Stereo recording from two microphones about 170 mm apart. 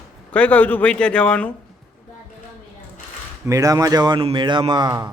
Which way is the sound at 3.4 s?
20° right (ahead or behind).